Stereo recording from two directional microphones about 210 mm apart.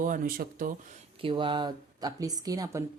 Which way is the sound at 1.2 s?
25° right (ahead or behind).